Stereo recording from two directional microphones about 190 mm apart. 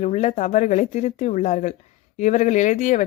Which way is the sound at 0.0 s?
35° left (ahead or behind).